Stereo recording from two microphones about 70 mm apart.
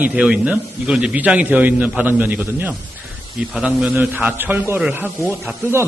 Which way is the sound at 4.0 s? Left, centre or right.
Right.